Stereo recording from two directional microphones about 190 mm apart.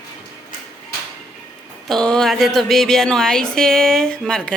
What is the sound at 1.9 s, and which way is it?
A woman's voice, 5° left (ahead or behind).